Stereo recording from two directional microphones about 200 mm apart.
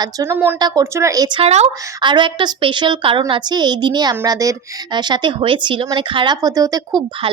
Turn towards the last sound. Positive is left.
turn(degrees=-20)  # may be behind; listen again after turning